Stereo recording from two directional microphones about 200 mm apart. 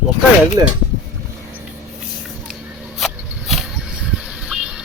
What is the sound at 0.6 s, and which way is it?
Speech, 15° right (ahead or behind).